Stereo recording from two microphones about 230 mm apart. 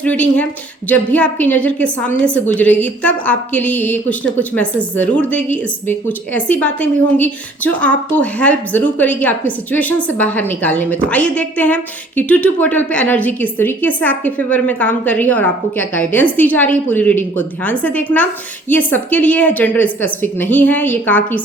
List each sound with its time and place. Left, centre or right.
0.0 s a woman's voice: centre